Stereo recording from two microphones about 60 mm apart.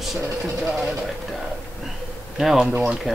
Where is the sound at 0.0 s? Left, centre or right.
Centre.